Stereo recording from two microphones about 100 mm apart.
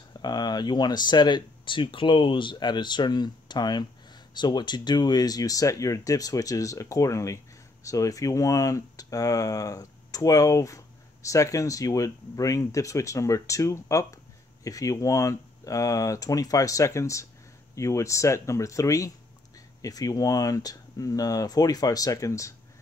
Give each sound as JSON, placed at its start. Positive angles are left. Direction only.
{"t": 0.2, "sound": "speech", "side_deg": 45}